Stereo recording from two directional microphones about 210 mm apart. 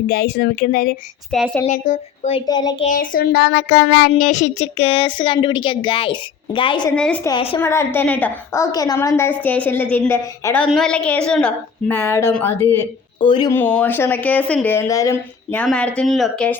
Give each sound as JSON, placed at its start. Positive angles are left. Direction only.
{"t": 0.1, "sound": "a woman's voice", "side_deg": 50}
{"t": 1.3, "sound": "speech", "side_deg": 0}
{"t": 1.6, "sound": "speech", "side_deg": 35}
{"t": 2.8, "sound": "speech", "side_deg": 40}
{"t": 6.9, "sound": "speech", "side_deg": 5}
{"t": 7.3, "sound": "speech", "side_deg": 25}
{"t": 7.6, "sound": "a woman's voice", "side_deg": 10}
{"t": 13.1, "sound": "speech", "side_deg": 20}
{"t": 13.5, "sound": "a woman's voice", "side_deg": 10}